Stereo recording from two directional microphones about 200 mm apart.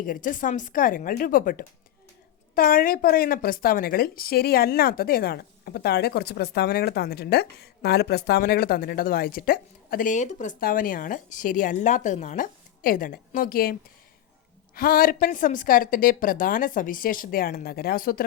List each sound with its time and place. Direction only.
0.0 s a woman's voice: 45° left (ahead or behind)
14.8 s a woman's voice: 45° left (ahead or behind)